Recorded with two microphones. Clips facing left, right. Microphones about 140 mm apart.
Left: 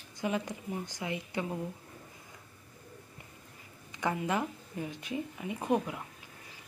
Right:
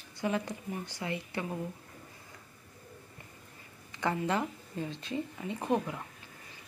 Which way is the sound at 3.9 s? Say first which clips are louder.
Right 1 dB; 15° left (ahead or behind).